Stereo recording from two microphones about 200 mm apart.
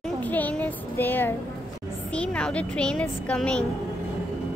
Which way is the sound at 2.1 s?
5° left (ahead or behind).